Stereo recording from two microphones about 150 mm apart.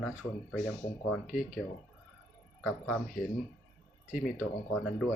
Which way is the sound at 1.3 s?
65° left (ahead or behind).